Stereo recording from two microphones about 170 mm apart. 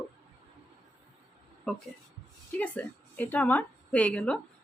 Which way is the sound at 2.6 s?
10° left (ahead or behind).